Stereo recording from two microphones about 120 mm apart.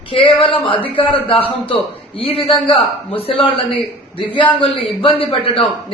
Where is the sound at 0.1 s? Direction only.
50° left (ahead or behind).